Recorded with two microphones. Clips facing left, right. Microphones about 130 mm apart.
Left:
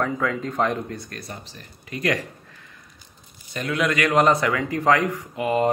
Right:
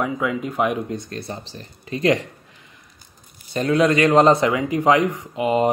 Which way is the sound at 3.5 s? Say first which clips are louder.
Right 6 dB; 30° right (ahead or behind).